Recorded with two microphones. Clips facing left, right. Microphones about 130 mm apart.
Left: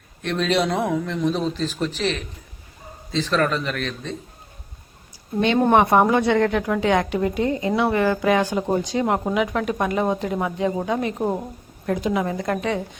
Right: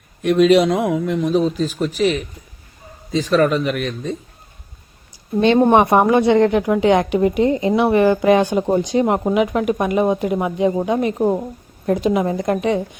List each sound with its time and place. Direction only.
0.2 s a woman's voice: 10° right (ahead or behind)
5.6 s a woman's voice: 15° right (ahead or behind)